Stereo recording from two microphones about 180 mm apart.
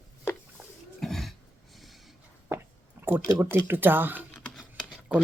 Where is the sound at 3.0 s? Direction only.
10° right (ahead or behind).